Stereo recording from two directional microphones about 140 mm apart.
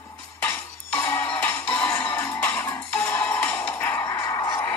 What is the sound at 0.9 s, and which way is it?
Music, 10° left (ahead or behind).